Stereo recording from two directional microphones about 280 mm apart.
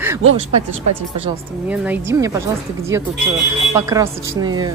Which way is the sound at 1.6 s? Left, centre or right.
Centre.